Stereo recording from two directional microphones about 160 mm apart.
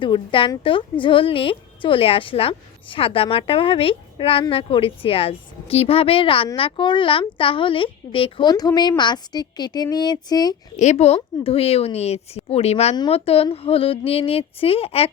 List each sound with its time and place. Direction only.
0.0 s speech: 30° left (ahead or behind)
10.8 s speech: 45° left (ahead or behind)